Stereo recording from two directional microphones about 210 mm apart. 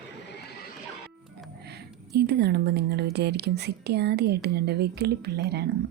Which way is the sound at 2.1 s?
50° right (ahead or behind).